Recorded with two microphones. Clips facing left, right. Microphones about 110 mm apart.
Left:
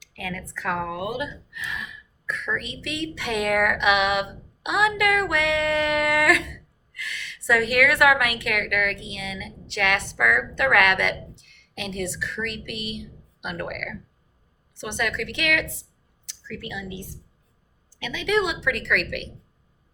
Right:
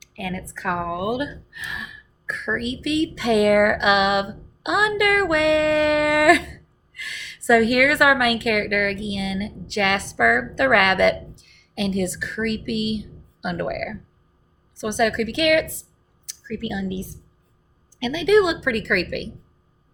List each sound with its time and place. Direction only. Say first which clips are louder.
0.2 s a woman's voice: right 3 dB; 20° right (ahead or behind)
18.0 s a woman's voice: right 7 dB; 20° right (ahead or behind)